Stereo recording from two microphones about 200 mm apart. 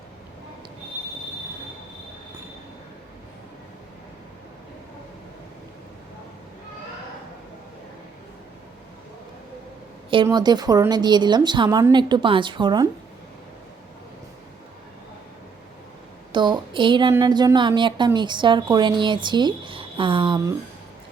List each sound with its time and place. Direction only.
10.2 s speech: 20° right (ahead or behind)
16.3 s speech: 25° right (ahead or behind)